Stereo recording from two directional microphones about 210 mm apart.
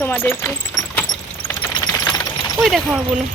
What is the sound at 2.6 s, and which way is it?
Speech, centre (ahead or behind).